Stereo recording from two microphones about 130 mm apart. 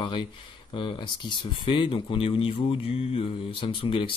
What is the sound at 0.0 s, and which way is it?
Speech, 40° left (ahead or behind).